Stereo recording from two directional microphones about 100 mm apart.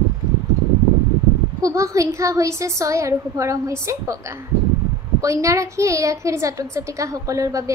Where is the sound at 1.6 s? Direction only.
30° right (ahead or behind).